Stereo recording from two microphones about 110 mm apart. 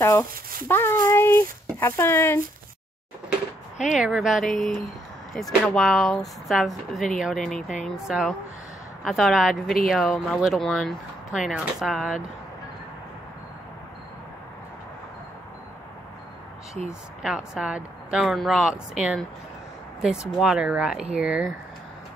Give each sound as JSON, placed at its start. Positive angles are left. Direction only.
{"t": 0.0, "sound": "speech", "side_deg": 25}
{"t": 3.9, "sound": "speech", "side_deg": -5}
{"t": 5.8, "sound": "speech", "side_deg": 0}
{"t": 9.0, "sound": "speech", "side_deg": 0}
{"t": 16.8, "sound": "speech", "side_deg": -5}